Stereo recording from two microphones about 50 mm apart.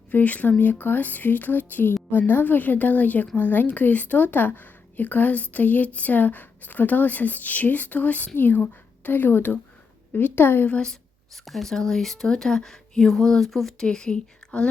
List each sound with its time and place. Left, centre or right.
0.1 s a woman's voice: left
11.4 s speech: centre
13.8 s speech: centre